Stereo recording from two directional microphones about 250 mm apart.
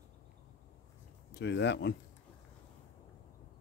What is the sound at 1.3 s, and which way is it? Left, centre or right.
Speech, left.